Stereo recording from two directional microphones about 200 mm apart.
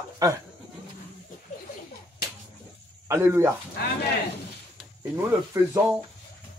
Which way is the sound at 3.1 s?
15° right (ahead or behind).